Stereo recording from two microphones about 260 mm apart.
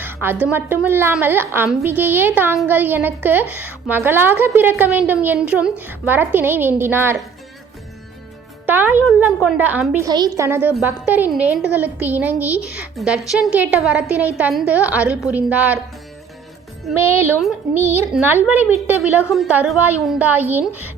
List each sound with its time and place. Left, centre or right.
0.0 s speech: centre
8.6 s a woman's voice: centre
17.0 s speech: centre